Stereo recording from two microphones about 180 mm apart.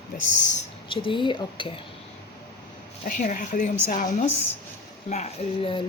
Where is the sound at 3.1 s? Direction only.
50° left (ahead or behind).